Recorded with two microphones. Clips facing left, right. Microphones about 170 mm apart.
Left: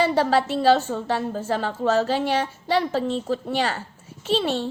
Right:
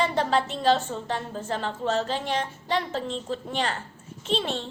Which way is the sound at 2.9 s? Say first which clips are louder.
Left 6 dB; 40° left (ahead or behind).